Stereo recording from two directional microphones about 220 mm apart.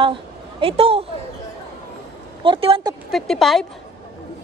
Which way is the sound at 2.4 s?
25° right (ahead or behind).